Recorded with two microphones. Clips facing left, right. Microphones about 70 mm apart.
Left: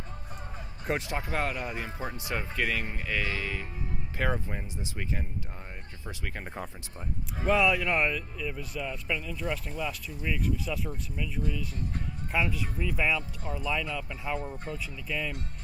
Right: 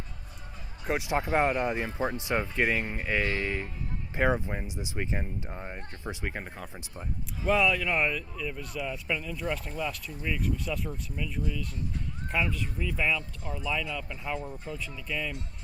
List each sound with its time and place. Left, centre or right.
1.0 s speech: right
7.4 s speech: centre